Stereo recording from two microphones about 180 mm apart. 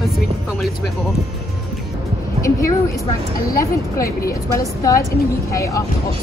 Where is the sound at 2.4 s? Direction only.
15° left (ahead or behind).